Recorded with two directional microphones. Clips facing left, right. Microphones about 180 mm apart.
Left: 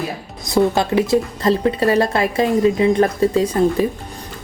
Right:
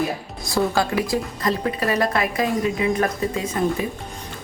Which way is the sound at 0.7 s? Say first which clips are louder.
Left 5 dB; 25° left (ahead or behind).